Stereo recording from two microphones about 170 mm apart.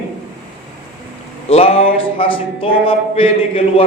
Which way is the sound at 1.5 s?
35° left (ahead or behind).